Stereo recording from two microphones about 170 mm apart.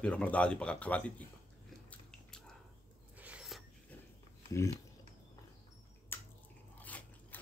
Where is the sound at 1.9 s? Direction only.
5° left (ahead or behind).